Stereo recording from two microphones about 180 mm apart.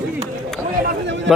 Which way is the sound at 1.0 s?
85° right.